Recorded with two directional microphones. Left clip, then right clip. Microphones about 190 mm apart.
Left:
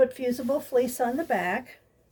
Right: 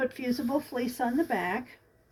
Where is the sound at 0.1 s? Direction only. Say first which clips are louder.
Left 3 dB; 40° left (ahead or behind).